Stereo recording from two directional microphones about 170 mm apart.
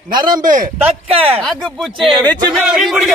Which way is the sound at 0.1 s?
25° right (ahead or behind).